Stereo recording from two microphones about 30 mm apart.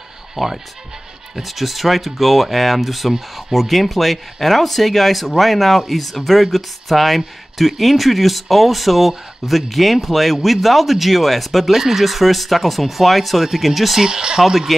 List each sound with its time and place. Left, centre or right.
0.4 s speech: centre
14.0 s speech: right
14.4 s speech: centre